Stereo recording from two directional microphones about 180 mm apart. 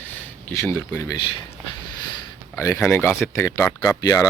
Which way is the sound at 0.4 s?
15° left (ahead or behind).